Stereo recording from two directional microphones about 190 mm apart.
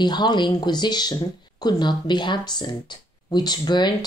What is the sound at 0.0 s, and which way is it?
Speech, 20° left (ahead or behind).